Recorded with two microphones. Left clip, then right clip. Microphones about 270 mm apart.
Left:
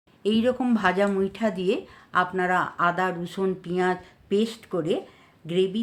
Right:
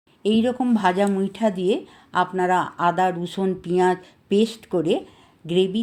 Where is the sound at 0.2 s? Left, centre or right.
Centre.